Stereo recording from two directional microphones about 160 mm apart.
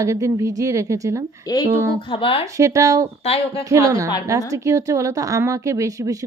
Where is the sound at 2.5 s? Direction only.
20° right (ahead or behind).